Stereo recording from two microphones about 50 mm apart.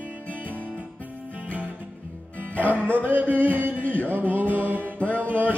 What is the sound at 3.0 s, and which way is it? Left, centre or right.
Speech, right.